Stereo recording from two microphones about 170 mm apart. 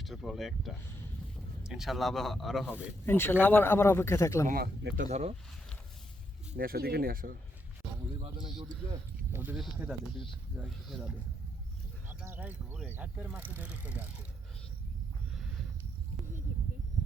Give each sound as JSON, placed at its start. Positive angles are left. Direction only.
{"t": 0.0, "sound": "a man's voice", "side_deg": 0}
{"t": 4.4, "sound": "speech", "side_deg": -65}
{"t": 4.9, "sound": "speech", "side_deg": -40}
{"t": 6.6, "sound": "speech", "side_deg": -60}
{"t": 8.9, "sound": "speech", "side_deg": -15}
{"t": 12.0, "sound": "speech", "side_deg": -15}